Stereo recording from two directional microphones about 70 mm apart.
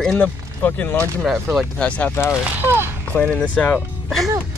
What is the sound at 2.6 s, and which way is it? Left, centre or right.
Speech, right.